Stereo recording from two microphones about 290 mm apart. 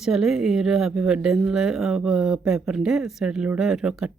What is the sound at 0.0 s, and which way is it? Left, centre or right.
Speech, centre.